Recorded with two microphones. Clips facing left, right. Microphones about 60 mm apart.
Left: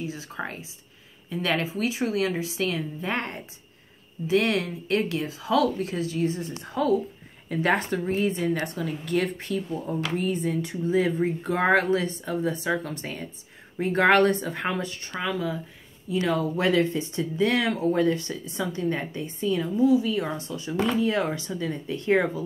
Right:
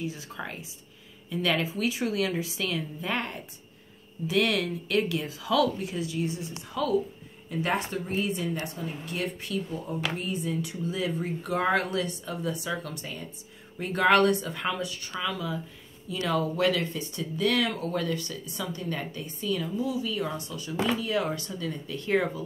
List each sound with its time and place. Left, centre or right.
0.0 s speech: left
7.4 s speech: left
8.2 s speech: left
8.7 s speech: left
20.2 s speech: left